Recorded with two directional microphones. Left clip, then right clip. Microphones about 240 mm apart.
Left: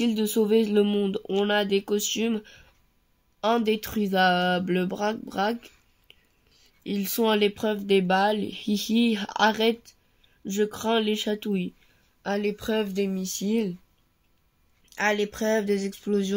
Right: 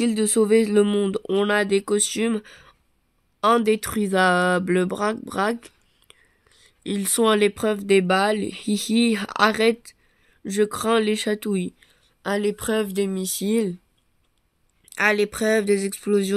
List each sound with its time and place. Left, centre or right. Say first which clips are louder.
0.3 s speech: right 4 dB; right
15.0 s speech: right 5 dB; right